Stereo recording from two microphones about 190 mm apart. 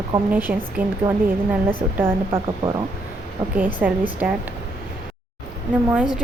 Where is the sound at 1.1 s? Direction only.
20° right (ahead or behind).